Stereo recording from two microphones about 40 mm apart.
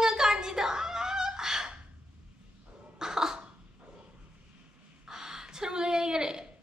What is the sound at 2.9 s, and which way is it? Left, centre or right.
Cough, centre.